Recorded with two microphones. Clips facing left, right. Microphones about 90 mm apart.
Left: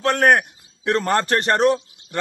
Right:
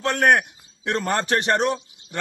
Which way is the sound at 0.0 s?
40° left (ahead or behind).